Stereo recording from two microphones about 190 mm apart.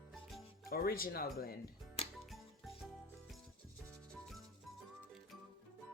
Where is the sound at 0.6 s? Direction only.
50° left (ahead or behind).